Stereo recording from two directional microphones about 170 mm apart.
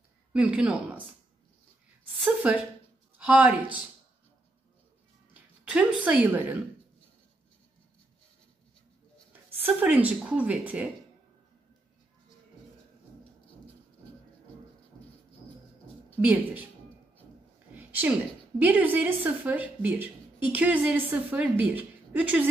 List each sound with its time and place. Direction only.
0.3 s a woman's voice: 5° right (ahead or behind)
2.2 s a woman's voice: 5° right (ahead or behind)
5.3 s speech: 5° right (ahead or behind)
9.6 s a woman's voice: 10° right (ahead or behind)
17.7 s a sound: 10° right (ahead or behind)
18.6 s a woman's voice: 10° right (ahead or behind)